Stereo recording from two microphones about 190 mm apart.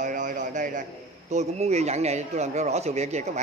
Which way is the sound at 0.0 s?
45° right (ahead or behind).